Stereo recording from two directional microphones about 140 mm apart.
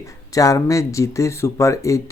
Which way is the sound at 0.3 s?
25° left (ahead or behind).